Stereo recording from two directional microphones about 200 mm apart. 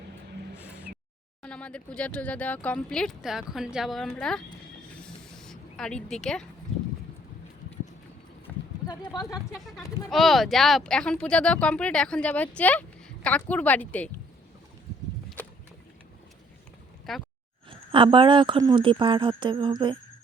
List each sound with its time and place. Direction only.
1.4 s speech: 5° left (ahead or behind)
4.9 s a sound: 5° left (ahead or behind)
8.9 s speech: 20° left (ahead or behind)
9.5 s speech: centre (ahead or behind)
17.1 s speech: centre (ahead or behind)
17.7 s a woman's voice: 25° right (ahead or behind)